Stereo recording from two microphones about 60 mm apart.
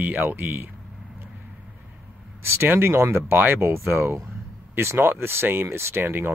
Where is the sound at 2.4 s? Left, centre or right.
Right.